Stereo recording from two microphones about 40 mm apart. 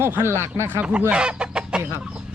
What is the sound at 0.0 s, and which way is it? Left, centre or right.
Speech, right.